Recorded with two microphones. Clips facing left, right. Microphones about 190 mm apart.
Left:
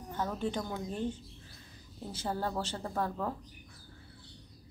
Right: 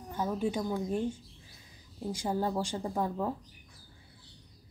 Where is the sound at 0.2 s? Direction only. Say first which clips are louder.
Right 3 dB; 10° right (ahead or behind).